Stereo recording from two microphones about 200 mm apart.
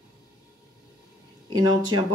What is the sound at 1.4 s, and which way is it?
Speech, 20° right (ahead or behind).